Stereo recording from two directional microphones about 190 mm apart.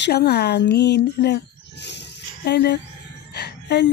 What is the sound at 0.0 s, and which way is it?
Speech, 60° left (ahead or behind).